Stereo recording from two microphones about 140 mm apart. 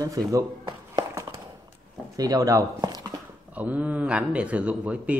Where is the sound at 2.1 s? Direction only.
25° right (ahead or behind).